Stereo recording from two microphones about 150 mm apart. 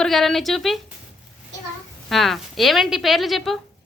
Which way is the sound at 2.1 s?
Centre (ahead or behind).